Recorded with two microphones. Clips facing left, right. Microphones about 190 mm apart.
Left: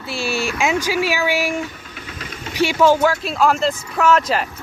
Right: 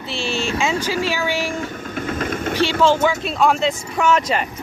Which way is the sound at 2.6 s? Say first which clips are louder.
Left 2 dB; 10° left (ahead or behind).